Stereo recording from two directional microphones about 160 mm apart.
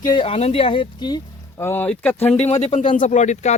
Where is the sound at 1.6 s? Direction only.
15° left (ahead or behind).